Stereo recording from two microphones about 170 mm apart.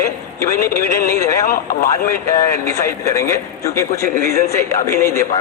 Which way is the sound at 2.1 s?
15° left (ahead or behind).